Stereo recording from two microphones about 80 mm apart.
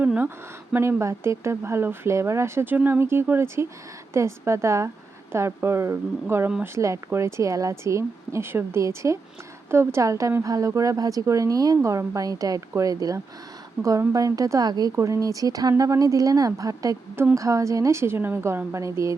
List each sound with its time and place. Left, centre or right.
0.0 s speech: centre
0.8 s a woman's voice: right
13.8 s a woman's voice: centre
14.1 s a woman's voice: right
14.9 s a woman's voice: right